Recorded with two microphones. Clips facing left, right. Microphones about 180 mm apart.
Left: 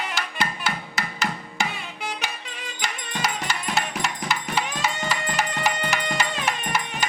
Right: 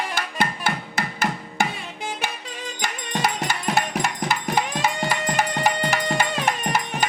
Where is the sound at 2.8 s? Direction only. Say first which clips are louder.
Right 3 dB; 45° right (ahead or behind).